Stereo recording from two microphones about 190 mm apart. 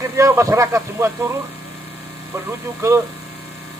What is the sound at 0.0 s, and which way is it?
Speech, 15° right (ahead or behind).